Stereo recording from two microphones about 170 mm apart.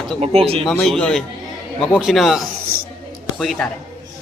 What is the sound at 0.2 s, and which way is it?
Speech, 35° right (ahead or behind).